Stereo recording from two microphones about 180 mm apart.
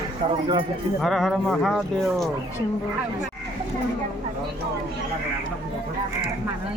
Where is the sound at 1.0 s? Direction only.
Centre (ahead or behind).